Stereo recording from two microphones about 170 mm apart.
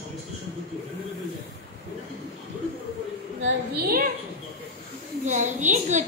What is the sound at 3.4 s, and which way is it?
Speech, 60° right (ahead or behind).